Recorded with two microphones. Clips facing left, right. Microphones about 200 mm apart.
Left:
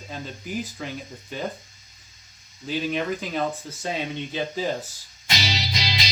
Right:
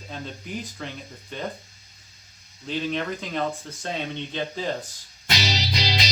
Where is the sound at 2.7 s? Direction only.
5° left (ahead or behind).